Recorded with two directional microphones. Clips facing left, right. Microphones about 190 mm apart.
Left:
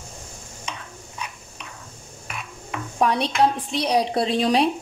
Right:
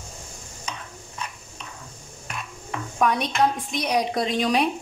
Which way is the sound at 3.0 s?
30° left (ahead or behind).